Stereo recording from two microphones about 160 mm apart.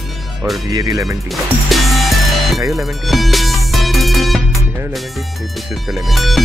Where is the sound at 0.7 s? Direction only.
20° right (ahead or behind).